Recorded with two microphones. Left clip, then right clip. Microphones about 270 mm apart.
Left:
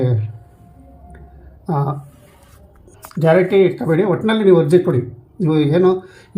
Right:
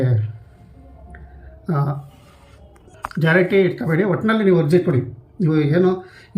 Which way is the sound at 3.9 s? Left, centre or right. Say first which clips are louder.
Left 3 dB; centre.